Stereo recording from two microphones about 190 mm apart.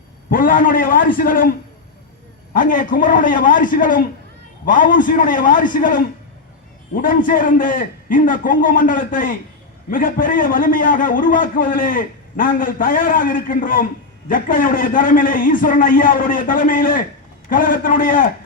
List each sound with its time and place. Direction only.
0.3 s a man's voice: 50° left (ahead or behind)